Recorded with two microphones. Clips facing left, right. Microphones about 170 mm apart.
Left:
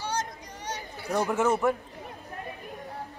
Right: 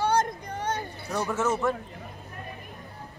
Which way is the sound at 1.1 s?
15° left (ahead or behind).